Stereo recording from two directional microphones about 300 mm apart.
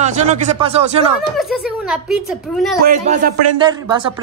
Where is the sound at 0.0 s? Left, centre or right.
Right.